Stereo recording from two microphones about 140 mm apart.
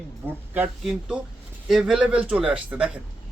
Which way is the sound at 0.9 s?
5° right (ahead or behind).